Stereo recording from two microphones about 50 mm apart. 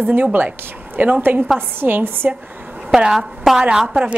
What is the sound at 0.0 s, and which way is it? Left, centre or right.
A woman's voice, right.